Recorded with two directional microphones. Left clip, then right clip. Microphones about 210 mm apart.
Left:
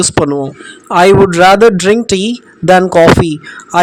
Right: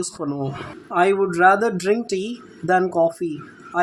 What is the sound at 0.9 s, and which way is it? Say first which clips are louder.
Speech: left 12 dB; 45° left (ahead or behind).